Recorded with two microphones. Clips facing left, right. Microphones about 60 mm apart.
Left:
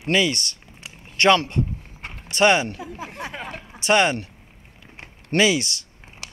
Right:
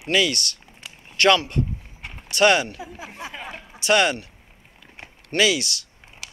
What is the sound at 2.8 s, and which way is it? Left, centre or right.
Speech, left.